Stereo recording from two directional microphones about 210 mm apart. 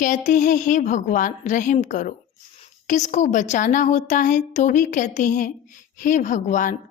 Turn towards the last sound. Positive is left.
turn(degrees=35)  # may be behind; listen again after turning